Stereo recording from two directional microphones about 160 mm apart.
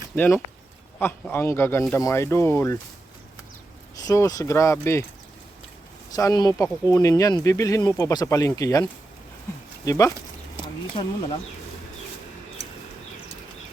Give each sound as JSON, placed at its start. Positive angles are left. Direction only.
{"t": 0.2, "sound": "speech", "side_deg": 10}
{"t": 4.0, "sound": "speech", "side_deg": 20}
{"t": 6.1, "sound": "speech", "side_deg": 25}
{"t": 11.0, "sound": "speech", "side_deg": 30}